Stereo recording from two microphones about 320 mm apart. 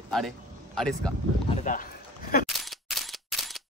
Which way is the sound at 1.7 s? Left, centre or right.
Left.